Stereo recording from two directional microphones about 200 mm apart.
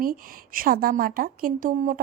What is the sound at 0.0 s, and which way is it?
A woman's voice, 45° right (ahead or behind).